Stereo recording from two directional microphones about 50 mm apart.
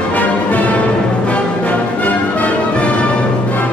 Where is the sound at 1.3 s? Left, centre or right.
Left.